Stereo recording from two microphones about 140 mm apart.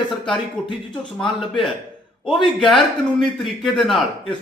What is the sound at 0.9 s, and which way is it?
Speech, 5° left (ahead or behind).